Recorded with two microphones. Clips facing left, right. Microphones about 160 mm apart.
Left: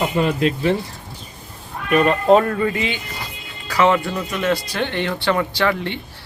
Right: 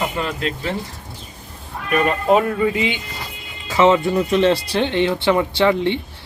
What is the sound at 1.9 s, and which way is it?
Speech, 5° right (ahead or behind).